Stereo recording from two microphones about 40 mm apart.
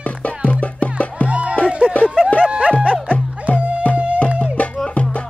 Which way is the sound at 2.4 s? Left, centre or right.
Right.